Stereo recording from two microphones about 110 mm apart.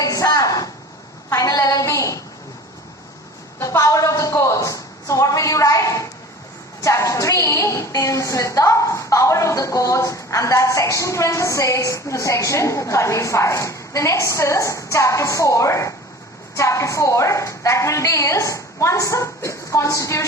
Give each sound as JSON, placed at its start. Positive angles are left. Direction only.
{"t": 0.0, "sound": "a sound", "side_deg": 30}
{"t": 1.3, "sound": "a woman's voice", "side_deg": 30}
{"t": 3.6, "sound": "a woman's voice", "side_deg": 30}